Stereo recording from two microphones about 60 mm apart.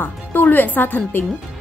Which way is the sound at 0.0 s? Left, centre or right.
Left.